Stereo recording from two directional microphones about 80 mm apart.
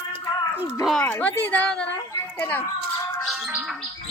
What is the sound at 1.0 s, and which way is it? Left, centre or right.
Speech, centre.